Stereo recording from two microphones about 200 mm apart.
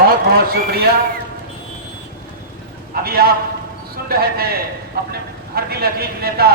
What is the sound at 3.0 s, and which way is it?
A man's voice, 50° right (ahead or behind).